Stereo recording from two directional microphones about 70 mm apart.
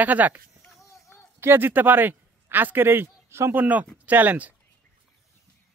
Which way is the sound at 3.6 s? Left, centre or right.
Right.